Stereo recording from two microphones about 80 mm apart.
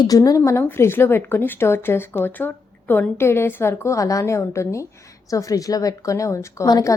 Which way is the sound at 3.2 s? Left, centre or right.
Left.